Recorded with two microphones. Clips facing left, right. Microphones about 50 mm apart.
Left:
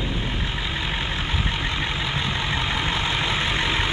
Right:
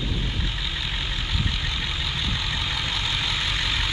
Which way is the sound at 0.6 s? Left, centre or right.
Left.